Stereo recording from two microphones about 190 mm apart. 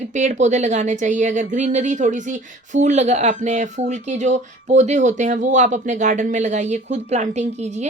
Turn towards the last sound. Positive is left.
turn(degrees=-35)  # may be behind; listen again after turning